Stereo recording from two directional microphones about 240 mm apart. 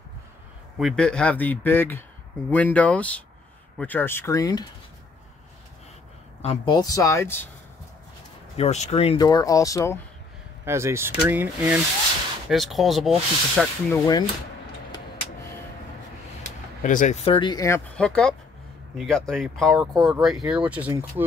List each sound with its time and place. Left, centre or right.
0.7 s speech: centre
6.4 s speech: left
8.5 s speech: left
10.6 s speech: centre
16.8 s speech: left; by 21.0 s centre